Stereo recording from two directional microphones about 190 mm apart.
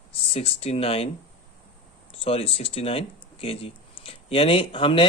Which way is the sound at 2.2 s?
30° left (ahead or behind).